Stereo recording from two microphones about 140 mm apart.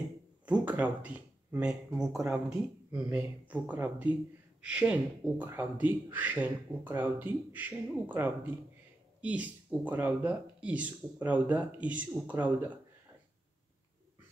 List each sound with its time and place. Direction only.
0.5 s speech: 10° right (ahead or behind)